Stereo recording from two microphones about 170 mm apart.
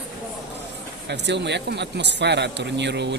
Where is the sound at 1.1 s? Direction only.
90° right.